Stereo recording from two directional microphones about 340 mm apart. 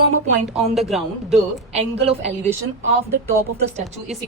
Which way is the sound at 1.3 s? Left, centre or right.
Centre.